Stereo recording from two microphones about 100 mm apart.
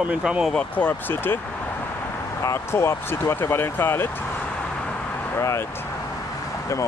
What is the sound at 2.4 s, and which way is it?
Speech, 25° left (ahead or behind).